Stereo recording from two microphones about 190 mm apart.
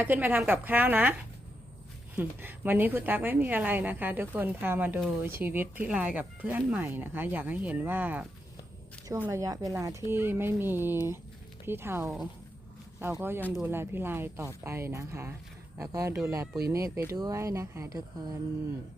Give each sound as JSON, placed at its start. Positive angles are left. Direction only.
{"t": 0.0, "sound": "a woman's voice", "side_deg": -10}
{"t": 2.1, "sound": "a woman's voice", "side_deg": -10}